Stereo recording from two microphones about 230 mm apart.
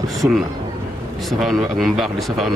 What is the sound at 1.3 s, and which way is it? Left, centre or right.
Speech, centre.